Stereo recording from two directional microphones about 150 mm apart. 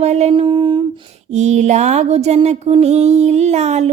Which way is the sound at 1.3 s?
50° right (ahead or behind).